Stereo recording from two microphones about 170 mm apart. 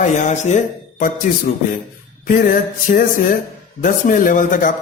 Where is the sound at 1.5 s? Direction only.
55° left (ahead or behind).